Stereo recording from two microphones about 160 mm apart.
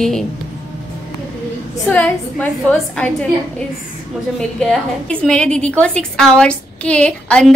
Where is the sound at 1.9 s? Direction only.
10° left (ahead or behind).